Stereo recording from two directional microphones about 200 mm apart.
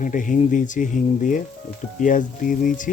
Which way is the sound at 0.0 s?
40° left (ahead or behind).